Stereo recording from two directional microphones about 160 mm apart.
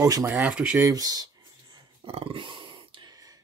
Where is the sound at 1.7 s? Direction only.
35° right (ahead or behind).